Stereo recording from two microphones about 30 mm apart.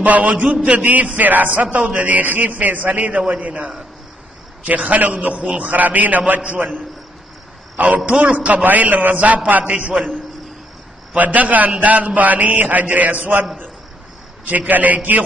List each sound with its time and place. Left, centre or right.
0.0 s a man's voice: right
0.7 s speech: right
1.1 s speech: right
1.8 s a man's voice: right
2.0 s a man's voice: right
3.1 s a man's voice: right
5.3 s a man's voice: right
5.7 s a man's voice: right
7.7 s speech: right
8.6 s a man's voice: right
9.1 s speech: right
9.7 s a man's voice: right
11.1 s a man's voice: right
14.7 s a man's voice: right